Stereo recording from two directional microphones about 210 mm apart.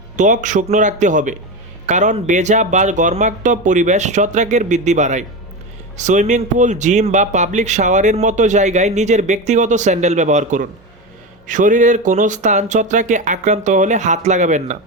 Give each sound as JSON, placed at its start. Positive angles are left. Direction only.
{"t": 0.2, "sound": "speech", "side_deg": -35}